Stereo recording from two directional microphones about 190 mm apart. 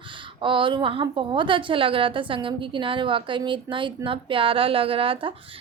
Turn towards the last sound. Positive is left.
turn(degrees=-30)  # may be behind; listen again after turning